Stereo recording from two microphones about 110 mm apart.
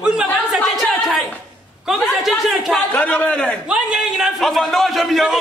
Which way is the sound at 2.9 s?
15° left (ahead or behind).